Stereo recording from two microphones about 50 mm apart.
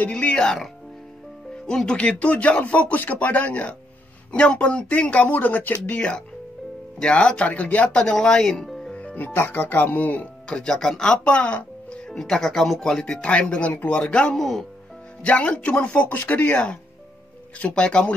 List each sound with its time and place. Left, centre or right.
0.1 s speech: left
1.7 s speech: centre
2.0 s speech: left
5.9 s speech: left
7.9 s speech: centre
8.6 s music: centre
8.9 s speech: left
10.5 s speech: centre
11.1 s speech: left
12.1 s speech: centre
14.3 s speech: centre
15.2 s speech: left